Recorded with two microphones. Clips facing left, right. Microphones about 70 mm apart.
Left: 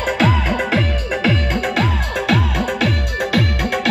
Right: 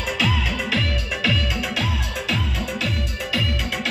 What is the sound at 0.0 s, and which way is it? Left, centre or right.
Music, left.